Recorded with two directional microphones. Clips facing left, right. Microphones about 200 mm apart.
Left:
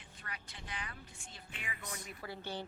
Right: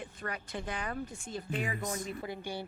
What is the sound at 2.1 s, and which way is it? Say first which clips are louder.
Speech: right 6 dB; 20° right (ahead or behind).